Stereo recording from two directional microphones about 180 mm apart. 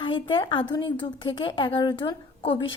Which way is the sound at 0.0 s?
25° left (ahead or behind).